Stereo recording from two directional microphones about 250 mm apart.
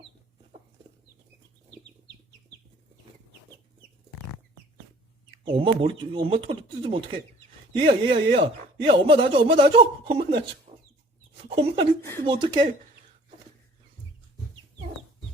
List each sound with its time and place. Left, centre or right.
5.5 s speech: right
10.7 s chicken: right
11.4 s speech: right